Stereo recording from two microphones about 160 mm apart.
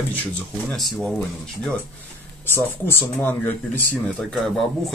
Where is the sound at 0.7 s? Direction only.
Centre (ahead or behind).